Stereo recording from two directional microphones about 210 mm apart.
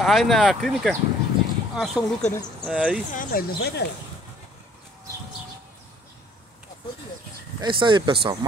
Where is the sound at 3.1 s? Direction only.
40° left (ahead or behind).